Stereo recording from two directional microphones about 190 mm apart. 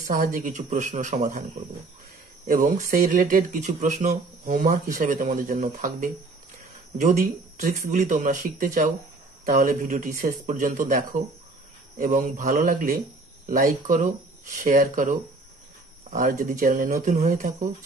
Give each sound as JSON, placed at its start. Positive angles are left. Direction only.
{"t": 0.0, "sound": "speech", "side_deg": -45}
{"t": 2.4, "sound": "speech", "side_deg": -45}
{"t": 16.2, "sound": "speech", "side_deg": -45}